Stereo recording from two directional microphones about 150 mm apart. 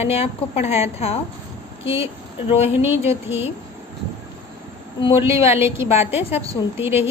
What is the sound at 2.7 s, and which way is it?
Speech, 15° right (ahead or behind).